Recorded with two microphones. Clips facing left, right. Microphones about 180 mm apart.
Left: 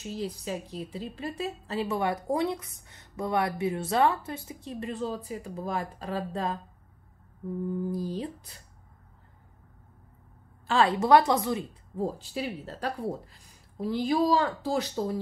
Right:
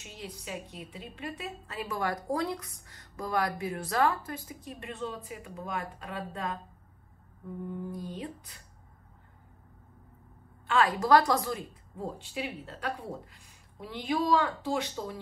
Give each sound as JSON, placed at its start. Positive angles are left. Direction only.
{"t": 0.0, "sound": "a woman's voice", "side_deg": 35}
{"t": 7.9, "sound": "a woman's voice", "side_deg": 35}
{"t": 10.7, "sound": "a woman's voice", "side_deg": 30}
{"t": 12.0, "sound": "a woman's voice", "side_deg": 35}